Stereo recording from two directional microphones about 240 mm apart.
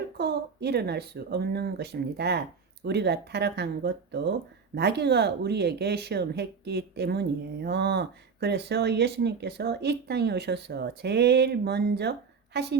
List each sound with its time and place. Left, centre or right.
0.2 s speech: right